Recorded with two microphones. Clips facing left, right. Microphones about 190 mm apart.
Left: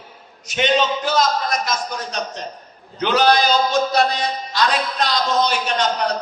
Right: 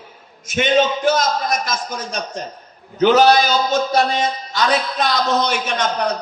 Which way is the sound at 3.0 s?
45° right (ahead or behind).